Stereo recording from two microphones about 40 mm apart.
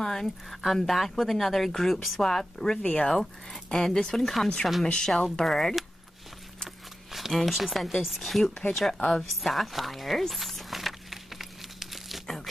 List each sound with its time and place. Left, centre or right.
0.0 s a sound: centre
0.5 s speech: centre
2.2 s speech: centre
2.8 s speech: left
3.7 s speech: centre
4.2 s speech: centre
5.0 s speech: centre
7.1 s a sound: centre
7.3 s speech: centre
9.4 s a sound: centre